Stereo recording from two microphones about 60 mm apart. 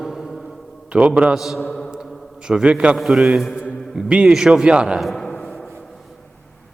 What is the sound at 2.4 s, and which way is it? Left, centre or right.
A man's voice, centre.